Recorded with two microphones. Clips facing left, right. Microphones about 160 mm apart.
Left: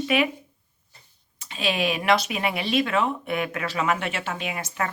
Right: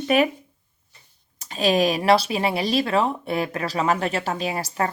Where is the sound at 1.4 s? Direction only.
40° right (ahead or behind).